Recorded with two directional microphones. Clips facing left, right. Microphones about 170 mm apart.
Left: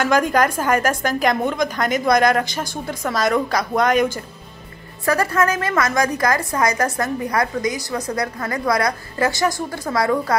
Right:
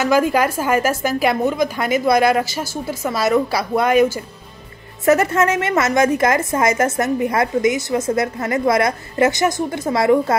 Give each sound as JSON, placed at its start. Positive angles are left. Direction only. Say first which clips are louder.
{"t": 0.0, "sound": "a woman's voice", "louder": "right 1 dB", "side_deg": -5}
{"t": 5.0, "sound": "a woman's voice", "louder": "right 4 dB", "side_deg": -20}